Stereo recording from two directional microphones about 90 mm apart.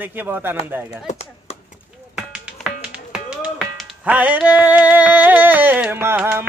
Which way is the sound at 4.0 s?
15° right (ahead or behind).